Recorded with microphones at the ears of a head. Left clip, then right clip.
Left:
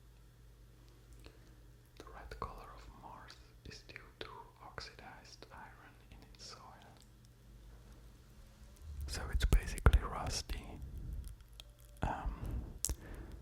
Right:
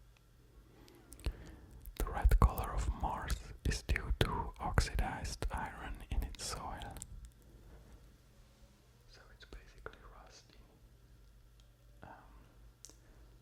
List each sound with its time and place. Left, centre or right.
0.9 s a sound: right
2.0 s whispering: right
9.0 s whispering: left